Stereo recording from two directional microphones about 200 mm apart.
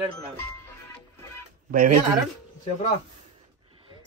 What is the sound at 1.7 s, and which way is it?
Speech, 45° right (ahead or behind).